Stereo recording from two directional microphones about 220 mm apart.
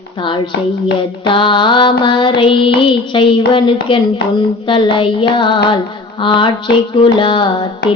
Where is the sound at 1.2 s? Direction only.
20° left (ahead or behind).